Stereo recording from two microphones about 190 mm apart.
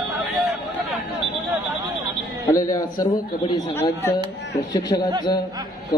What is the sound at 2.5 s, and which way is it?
A man's voice, 20° left (ahead or behind).